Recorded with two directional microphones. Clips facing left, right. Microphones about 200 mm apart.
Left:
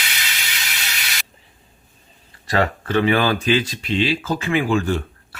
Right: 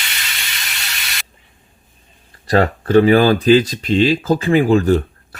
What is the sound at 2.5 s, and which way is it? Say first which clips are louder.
Speech: right 7 dB; 40° right (ahead or behind).